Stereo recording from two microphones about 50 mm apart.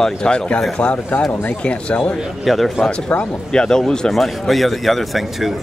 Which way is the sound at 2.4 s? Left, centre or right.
Centre.